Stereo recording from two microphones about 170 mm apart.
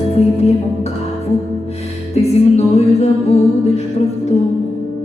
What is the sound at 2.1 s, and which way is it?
Music, 40° left (ahead or behind).